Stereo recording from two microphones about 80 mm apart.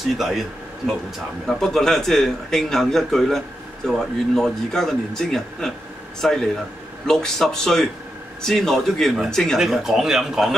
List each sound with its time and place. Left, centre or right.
0.0 s a man's voice: centre
1.4 s a man's voice: centre
9.6 s a man's voice: centre